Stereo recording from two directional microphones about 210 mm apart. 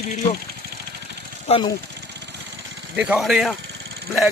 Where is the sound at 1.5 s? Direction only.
25° left (ahead or behind).